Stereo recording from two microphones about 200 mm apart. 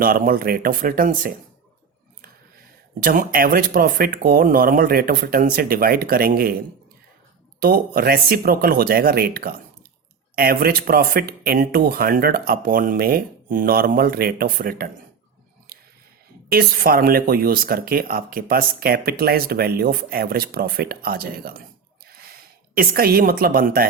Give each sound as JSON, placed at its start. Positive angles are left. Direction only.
{"t": 0.0, "sound": "speech", "side_deg": -45}
{"t": 3.0, "sound": "speech", "side_deg": -45}
{"t": 7.6, "sound": "speech", "side_deg": -50}
{"t": 16.5, "sound": "speech", "side_deg": -50}
{"t": 22.7, "sound": "speech", "side_deg": -45}